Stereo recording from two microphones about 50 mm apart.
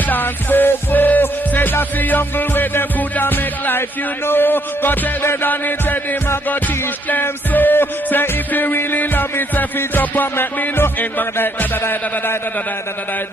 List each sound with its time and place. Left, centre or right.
0.1 s music: left
4.3 s a man's voice: left
7.1 s music: left